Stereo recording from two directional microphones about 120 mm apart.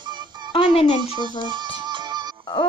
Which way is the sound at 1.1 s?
40° right (ahead or behind).